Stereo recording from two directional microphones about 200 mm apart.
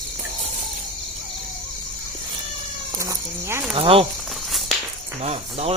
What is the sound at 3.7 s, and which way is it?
Speech, 30° right (ahead or behind).